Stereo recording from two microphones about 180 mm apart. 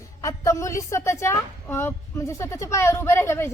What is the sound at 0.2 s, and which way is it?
A woman's voice, 15° left (ahead or behind).